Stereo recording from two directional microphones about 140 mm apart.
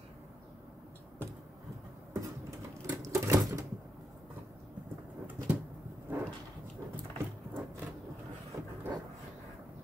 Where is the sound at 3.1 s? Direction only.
20° right (ahead or behind).